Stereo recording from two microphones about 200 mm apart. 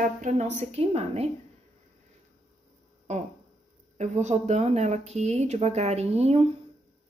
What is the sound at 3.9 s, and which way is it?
Speech, 35° right (ahead or behind).